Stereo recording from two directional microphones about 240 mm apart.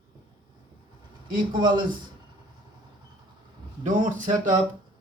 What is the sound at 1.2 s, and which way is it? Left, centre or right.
Speech, centre.